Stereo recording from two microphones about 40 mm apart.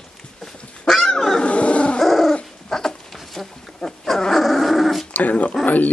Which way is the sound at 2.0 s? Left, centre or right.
Centre.